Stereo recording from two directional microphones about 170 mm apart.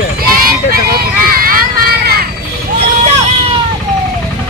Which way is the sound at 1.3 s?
60° right (ahead or behind).